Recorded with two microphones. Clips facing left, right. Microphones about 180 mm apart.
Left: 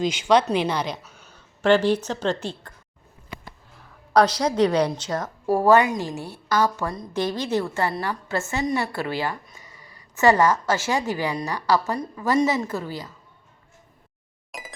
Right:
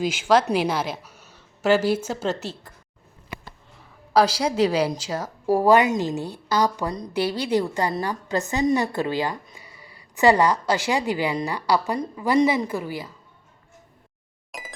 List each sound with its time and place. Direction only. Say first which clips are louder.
0.0 s a woman's voice: even; 5° right (ahead or behind)
4.1 s a woman's voice: left 1 dB; 5° right (ahead or behind)
14.5 s music: even; centre (ahead or behind)